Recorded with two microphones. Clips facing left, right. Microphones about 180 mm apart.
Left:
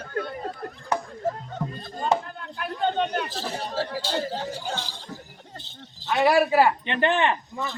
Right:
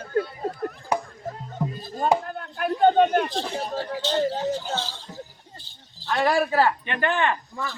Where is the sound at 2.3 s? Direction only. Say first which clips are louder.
Right 6 dB; 50° right (ahead or behind).